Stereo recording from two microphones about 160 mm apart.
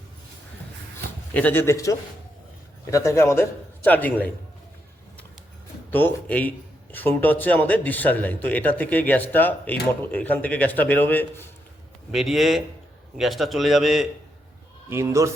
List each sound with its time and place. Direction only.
1.3 s speech: 10° left (ahead or behind)
5.9 s speech: 10° left (ahead or behind)
12.1 s a man's voice: centre (ahead or behind)
14.8 s speech: 15° right (ahead or behind)